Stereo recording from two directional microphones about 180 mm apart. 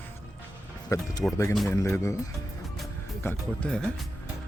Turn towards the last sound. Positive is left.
turn(degrees=0)  # may be behind; listen again after turning